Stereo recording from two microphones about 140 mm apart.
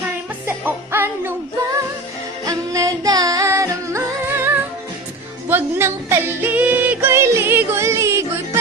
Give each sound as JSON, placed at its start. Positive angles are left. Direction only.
{"t": 0.4, "sound": "music", "side_deg": -15}
{"t": 2.5, "sound": "music", "side_deg": -25}